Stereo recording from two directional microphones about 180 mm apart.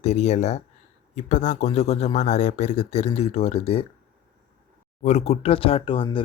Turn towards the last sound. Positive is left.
turn(degrees=30)  # may be behind; listen again after turning